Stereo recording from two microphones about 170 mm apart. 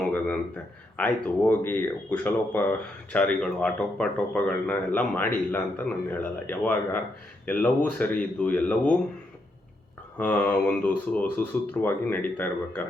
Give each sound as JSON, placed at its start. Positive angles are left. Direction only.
{"t": 0.0, "sound": "a sound", "side_deg": 10}
{"t": 0.9, "sound": "speech", "side_deg": 10}
{"t": 10.2, "sound": "speech", "side_deg": 10}